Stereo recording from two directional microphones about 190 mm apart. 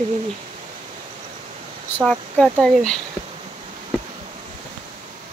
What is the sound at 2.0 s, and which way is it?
Speech, centre (ahead or behind).